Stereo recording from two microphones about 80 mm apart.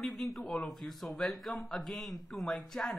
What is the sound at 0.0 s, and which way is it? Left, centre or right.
Speech, centre.